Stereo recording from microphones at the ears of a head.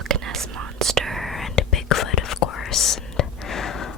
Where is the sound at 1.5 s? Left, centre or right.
Left.